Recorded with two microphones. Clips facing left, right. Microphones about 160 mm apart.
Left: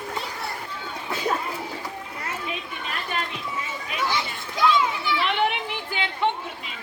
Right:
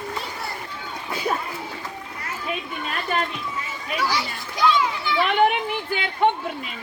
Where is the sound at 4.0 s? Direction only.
20° left (ahead or behind).